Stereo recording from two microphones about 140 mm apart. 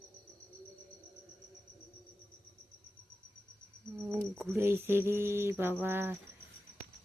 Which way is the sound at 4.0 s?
15° right (ahead or behind).